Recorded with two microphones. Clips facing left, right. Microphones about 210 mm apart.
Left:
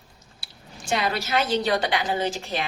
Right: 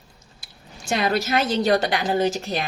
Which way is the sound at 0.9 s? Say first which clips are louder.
Right 3 dB; 45° right (ahead or behind).